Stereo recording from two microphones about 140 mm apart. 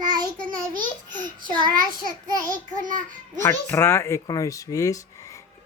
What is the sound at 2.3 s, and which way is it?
Child singing, 25° right (ahead or behind).